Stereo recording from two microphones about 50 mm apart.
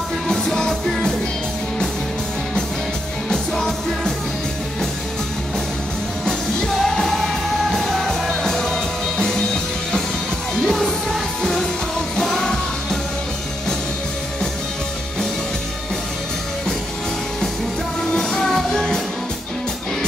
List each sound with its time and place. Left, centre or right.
0.3 s music: centre
3.5 s music: centre
6.7 s music: centre
10.7 s music: centre
18.1 s music: centre